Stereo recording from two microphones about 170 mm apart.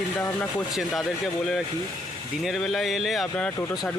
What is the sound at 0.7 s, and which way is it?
A man's voice, centre (ahead or behind).